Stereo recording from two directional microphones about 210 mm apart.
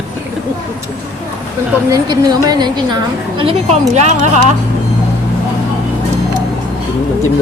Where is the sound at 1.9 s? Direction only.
20° right (ahead or behind).